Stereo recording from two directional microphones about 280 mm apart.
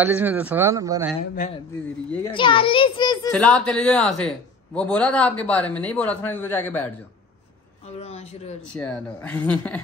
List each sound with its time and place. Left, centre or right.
0.0 s speech: centre
2.2 s a child's voice: centre
3.3 s a man's voice: centre
8.0 s a sound: left
8.7 s a man's voice: centre